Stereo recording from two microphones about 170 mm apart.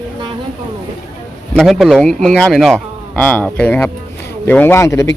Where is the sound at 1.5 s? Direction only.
Centre (ahead or behind); by 5.2 s 15° left (ahead or behind).